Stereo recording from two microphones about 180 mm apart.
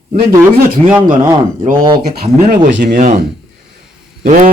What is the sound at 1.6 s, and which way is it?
Speech, 50° right (ahead or behind).